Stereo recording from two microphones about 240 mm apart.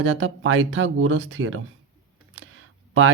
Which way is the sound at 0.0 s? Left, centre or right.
Right.